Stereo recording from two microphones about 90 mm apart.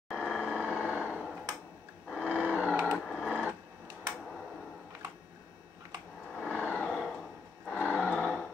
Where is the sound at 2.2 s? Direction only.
15° right (ahead or behind).